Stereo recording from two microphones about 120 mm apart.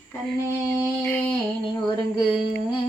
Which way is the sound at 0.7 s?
15° left (ahead or behind).